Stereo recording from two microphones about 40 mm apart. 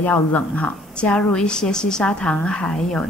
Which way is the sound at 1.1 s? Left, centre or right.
Centre.